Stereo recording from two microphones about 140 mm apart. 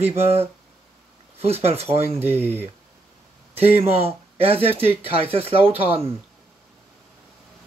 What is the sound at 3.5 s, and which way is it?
Speech, 45° right (ahead or behind).